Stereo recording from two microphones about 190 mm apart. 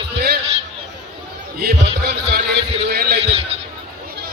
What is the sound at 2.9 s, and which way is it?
Speech, 55° right (ahead or behind).